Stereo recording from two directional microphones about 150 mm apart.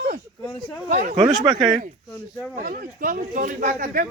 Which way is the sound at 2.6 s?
70° right (ahead or behind).